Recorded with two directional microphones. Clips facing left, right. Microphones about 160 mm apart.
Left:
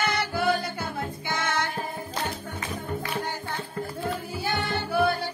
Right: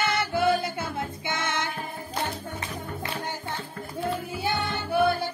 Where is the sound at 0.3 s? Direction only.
25° right (ahead or behind).